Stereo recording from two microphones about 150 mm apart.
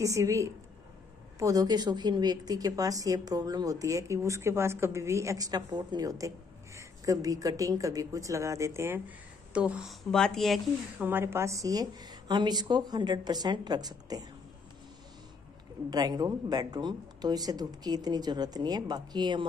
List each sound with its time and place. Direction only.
0.0 s a woman's voice: 20° right (ahead or behind); by 10.6 s centre (ahead or behind)
11.0 s a woman's voice: 15° right (ahead or behind)
15.9 s a woman's voice: 25° right (ahead or behind)